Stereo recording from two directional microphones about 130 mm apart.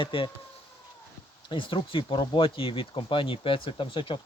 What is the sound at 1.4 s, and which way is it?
Speech, 40° left (ahead or behind).